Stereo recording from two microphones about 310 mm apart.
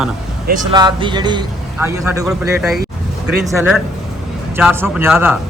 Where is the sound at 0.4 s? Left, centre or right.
Right.